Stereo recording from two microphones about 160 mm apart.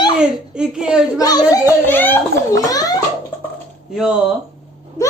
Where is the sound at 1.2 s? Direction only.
20° left (ahead or behind).